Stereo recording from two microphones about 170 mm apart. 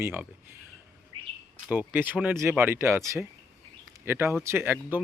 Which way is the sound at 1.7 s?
10° right (ahead or behind).